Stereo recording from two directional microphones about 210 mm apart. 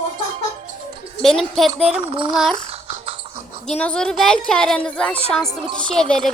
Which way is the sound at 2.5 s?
25° right (ahead or behind).